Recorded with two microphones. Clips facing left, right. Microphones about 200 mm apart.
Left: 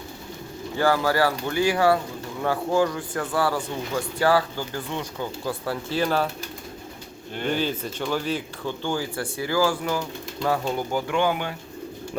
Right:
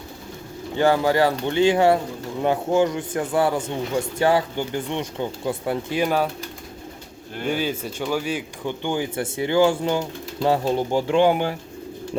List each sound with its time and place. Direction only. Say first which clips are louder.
0.8 s speech: right 3 dB; 20° right (ahead or behind)
7.3 s speech: right 1 dB; 10° right (ahead or behind); by 11.5 s 30° right (ahead or behind)